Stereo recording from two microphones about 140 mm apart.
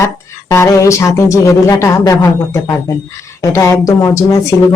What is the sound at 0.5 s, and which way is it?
Speech, 20° left (ahead or behind).